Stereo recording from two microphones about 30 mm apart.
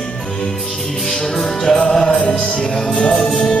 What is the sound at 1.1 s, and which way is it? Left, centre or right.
Music, centre.